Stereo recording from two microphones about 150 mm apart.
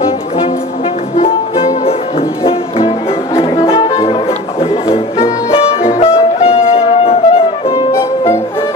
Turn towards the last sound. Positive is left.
turn(degrees=40)  # may be behind; listen again after turning